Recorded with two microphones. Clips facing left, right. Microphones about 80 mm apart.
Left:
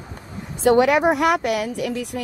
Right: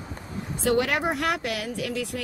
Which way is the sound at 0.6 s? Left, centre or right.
Left.